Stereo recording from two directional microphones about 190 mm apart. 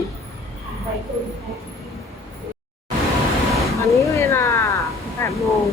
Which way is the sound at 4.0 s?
15° left (ahead or behind).